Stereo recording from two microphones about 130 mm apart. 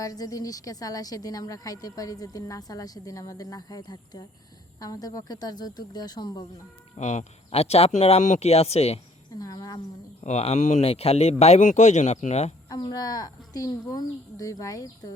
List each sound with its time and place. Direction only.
0.0 s a woman's voice: 25° left (ahead or behind)
6.9 s speech: 65° left (ahead or behind)
9.4 s speech: 30° left (ahead or behind)
10.2 s speech: 55° left (ahead or behind)
12.6 s a woman's voice: 30° left (ahead or behind)